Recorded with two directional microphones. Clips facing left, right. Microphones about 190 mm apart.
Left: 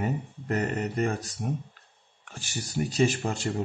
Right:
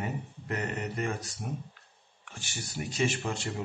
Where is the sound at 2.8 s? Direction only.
35° left (ahead or behind).